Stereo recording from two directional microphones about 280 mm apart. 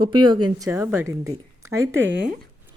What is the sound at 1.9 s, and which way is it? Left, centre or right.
Speech, right.